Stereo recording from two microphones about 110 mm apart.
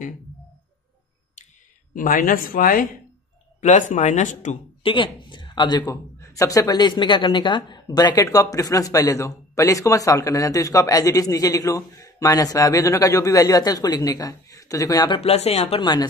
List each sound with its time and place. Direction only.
3.6 s speech: 90° left
4.8 s speech: 50° left (ahead or behind)
6.1 s a woman's voice: 25° left (ahead or behind)
15.0 s speech: 65° left (ahead or behind)
15.8 s a woman's voice: 40° left (ahead or behind)